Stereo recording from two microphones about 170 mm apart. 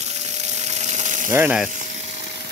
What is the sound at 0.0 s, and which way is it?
Water, 40° right (ahead or behind).